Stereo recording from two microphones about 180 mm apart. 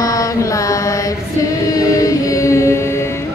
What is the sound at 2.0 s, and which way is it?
Music, 20° left (ahead or behind).